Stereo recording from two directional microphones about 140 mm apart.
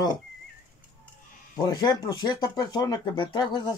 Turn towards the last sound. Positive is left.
turn(degrees=35)  # may be behind; listen again after turning